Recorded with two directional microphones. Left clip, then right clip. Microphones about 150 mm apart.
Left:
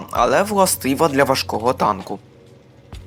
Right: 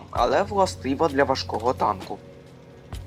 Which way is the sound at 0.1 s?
45° left (ahead or behind).